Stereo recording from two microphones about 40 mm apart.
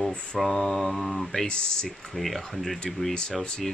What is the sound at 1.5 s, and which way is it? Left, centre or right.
Speech, centre.